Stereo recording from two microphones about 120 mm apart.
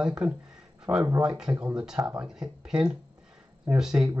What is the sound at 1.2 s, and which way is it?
Speech, 5° right (ahead or behind).